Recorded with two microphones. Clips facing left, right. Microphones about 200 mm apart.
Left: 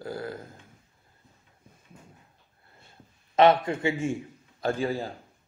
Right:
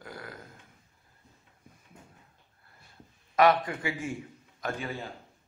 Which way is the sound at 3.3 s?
25° left (ahead or behind).